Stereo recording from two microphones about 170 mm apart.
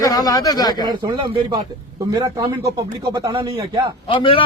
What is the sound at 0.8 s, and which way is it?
Speech, 25° right (ahead or behind).